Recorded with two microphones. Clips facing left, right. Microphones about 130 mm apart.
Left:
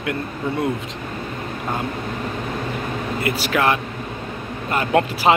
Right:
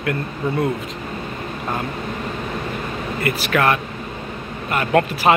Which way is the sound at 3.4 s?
20° left (ahead or behind).